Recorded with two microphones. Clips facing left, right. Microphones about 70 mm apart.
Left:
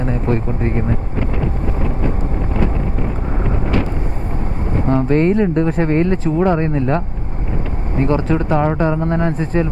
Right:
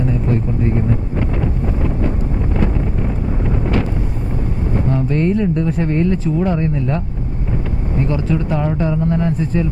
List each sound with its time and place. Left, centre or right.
0.0 s speech: left
4.9 s speech: left